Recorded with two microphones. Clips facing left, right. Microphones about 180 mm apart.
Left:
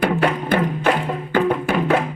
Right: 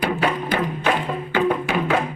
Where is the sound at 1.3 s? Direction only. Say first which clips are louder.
Left 2 dB; 50° left (ahead or behind).